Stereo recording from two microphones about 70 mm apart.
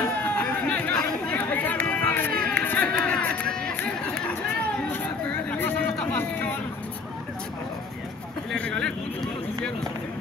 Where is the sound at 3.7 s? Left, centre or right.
Centre.